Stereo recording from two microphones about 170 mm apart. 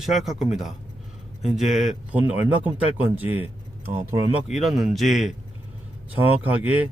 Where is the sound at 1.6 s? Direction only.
40° left (ahead or behind).